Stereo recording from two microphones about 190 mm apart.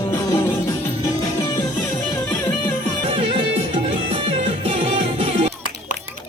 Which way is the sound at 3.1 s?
30° right (ahead or behind).